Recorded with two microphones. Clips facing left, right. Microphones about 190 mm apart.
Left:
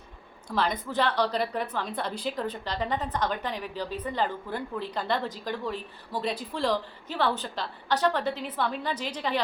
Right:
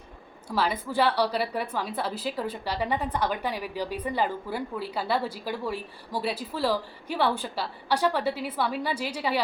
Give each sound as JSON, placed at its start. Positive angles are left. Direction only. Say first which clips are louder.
{"t": 0.4, "sound": "a woman's voice", "louder": "right 1 dB", "side_deg": -5}